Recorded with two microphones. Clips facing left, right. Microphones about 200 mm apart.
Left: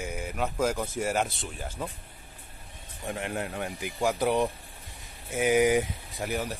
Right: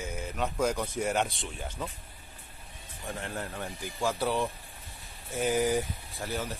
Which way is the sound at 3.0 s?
15° left (ahead or behind).